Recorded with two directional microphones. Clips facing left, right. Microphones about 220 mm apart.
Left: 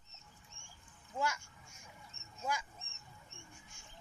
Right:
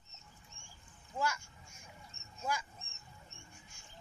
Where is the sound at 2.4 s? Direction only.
20° left (ahead or behind).